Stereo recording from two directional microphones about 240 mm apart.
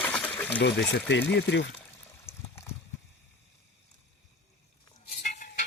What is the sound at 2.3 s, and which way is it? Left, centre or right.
Water, centre.